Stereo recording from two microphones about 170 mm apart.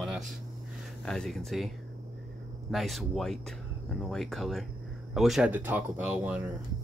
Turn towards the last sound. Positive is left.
turn(degrees=-10)  # may be behind; listen again after turning